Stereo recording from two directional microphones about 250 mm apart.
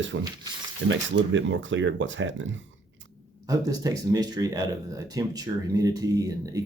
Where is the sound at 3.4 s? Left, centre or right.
Centre.